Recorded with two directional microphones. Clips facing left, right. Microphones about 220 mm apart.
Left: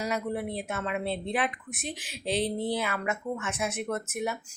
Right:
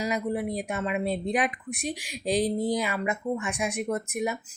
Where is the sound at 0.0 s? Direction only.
10° right (ahead or behind).